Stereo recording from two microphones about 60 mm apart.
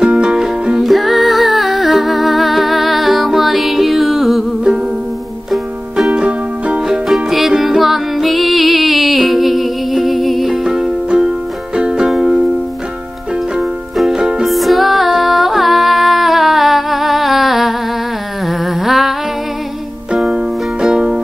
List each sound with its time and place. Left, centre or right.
0.0 s music: centre
5.5 s music: centre
6.1 s music: right
6.9 s music: centre
13.6 s music: centre
18.5 s humming: centre
20.3 s music: centre